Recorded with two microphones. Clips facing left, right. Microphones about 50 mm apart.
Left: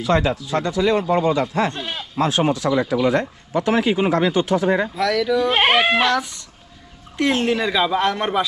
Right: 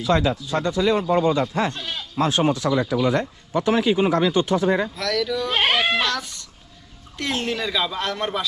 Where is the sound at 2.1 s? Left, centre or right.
Left.